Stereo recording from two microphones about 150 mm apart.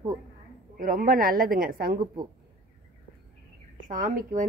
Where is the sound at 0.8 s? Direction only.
65° right (ahead or behind); by 2.0 s 90° right.